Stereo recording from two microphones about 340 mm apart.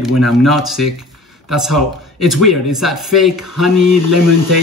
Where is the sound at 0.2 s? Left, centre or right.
Centre.